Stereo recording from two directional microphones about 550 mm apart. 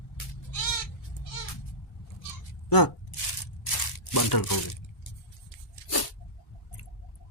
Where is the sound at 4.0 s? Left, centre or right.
Left.